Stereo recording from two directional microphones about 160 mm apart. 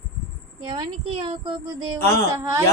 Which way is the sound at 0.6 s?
30° right (ahead or behind).